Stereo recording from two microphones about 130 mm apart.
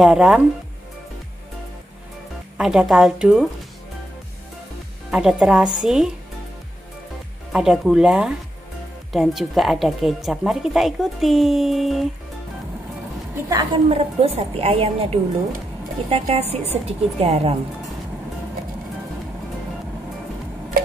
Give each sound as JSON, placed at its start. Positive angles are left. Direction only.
{"t": 0.0, "sound": "speech", "side_deg": -5}
{"t": 2.5, "sound": "speech", "side_deg": -5}
{"t": 5.1, "sound": "speech", "side_deg": -5}
{"t": 7.5, "sound": "speech", "side_deg": -5}
{"t": 13.3, "sound": "a sound", "side_deg": -20}
{"t": 13.8, "sound": "a woman's voice", "side_deg": -50}